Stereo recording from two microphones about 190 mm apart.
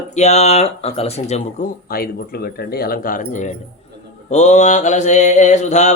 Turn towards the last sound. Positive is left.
turn(degrees=35)  # may be behind; listen again after turning